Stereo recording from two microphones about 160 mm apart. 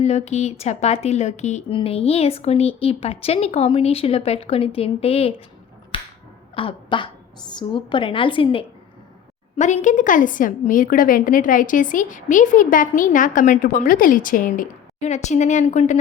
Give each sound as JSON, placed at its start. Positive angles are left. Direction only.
{"t": 0.0, "sound": "speech", "side_deg": 45}
{"t": 6.6, "sound": "speech", "side_deg": 30}
{"t": 9.6, "sound": "a woman's voice", "side_deg": 50}